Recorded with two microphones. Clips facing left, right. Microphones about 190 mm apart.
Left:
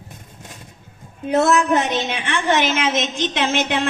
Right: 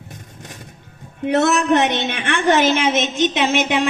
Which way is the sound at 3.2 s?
15° right (ahead or behind).